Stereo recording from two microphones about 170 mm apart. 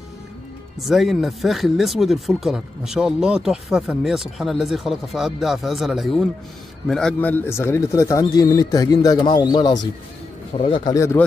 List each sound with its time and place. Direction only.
0.7 s speech: centre (ahead or behind); by 11.2 s 15° left (ahead or behind)